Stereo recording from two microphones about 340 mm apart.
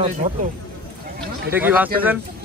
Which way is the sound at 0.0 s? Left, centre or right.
Right.